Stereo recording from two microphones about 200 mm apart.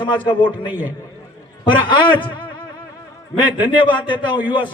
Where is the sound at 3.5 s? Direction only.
25° left (ahead or behind).